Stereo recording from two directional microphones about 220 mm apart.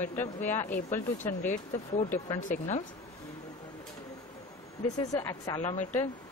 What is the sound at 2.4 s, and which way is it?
Speech, 35° left (ahead or behind).